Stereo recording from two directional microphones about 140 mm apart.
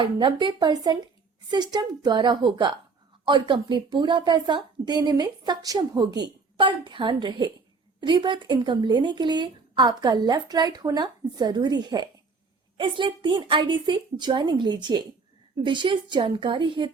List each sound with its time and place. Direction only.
0.0 s a woman's voice: 35° right (ahead or behind)